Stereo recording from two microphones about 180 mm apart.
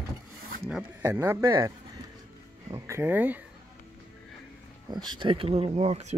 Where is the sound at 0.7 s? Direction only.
10° right (ahead or behind).